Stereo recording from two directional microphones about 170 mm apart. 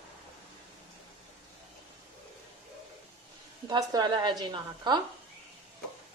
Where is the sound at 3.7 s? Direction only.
25° right (ahead or behind).